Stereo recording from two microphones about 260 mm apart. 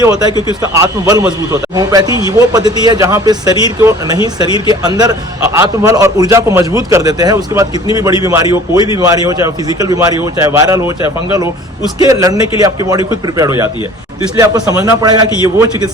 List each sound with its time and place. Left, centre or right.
0.0 s a man's voice: centre
11.9 s a man's voice: centre